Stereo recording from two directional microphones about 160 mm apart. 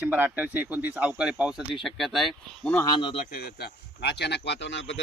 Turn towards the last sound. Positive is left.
turn(degrees=90)